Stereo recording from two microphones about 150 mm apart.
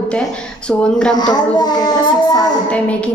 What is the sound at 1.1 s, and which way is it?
Child singing, 25° left (ahead or behind).